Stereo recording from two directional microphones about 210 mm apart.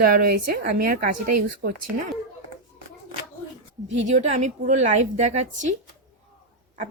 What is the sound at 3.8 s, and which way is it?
A woman's voice, 35° right (ahead or behind).